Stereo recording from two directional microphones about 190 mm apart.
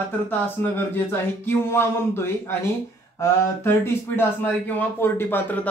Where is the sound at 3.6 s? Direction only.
10° left (ahead or behind).